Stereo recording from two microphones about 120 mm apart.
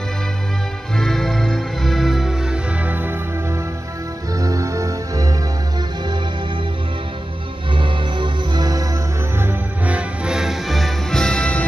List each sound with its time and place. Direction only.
0.9 s music: 5° left (ahead or behind); by 3.2 s 15° right (ahead or behind)
4.4 s music: 30° right (ahead or behind)
7.7 s music: 45° right (ahead or behind)
9.4 s music: 15° right (ahead or behind); by 11.6 s 10° left (ahead or behind)